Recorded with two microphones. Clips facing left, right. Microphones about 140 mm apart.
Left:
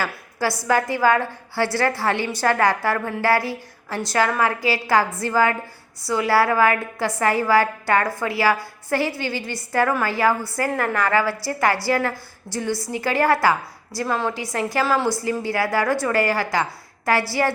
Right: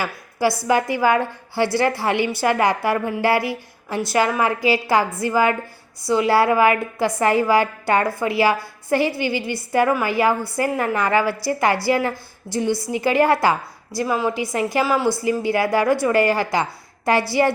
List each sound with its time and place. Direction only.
0.0 s a sound: 15° right (ahead or behind)
0.6 s a woman's voice: 15° right (ahead or behind)
14.8 s a woman's voice: 5° right (ahead or behind)
15.2 s a woman's voice: 15° right (ahead or behind)